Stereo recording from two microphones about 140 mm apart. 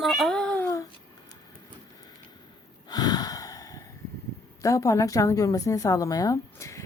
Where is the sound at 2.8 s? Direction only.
30° left (ahead or behind).